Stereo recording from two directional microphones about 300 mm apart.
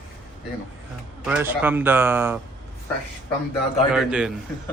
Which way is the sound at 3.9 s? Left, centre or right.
Centre.